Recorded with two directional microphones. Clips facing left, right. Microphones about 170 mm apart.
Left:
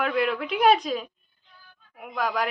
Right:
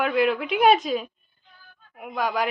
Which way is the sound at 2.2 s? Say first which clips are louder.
Right 2 dB; centre (ahead or behind).